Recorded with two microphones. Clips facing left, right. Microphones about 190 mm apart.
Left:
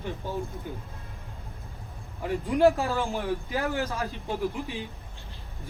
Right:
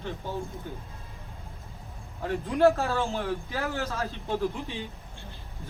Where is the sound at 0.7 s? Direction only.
10° left (ahead or behind).